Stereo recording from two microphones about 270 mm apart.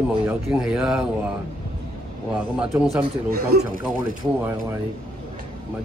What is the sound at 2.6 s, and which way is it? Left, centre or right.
Speech, centre.